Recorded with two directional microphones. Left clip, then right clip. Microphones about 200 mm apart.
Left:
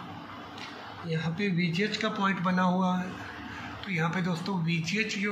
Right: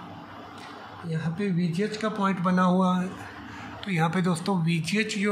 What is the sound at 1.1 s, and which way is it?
Speech, 50° right (ahead or behind).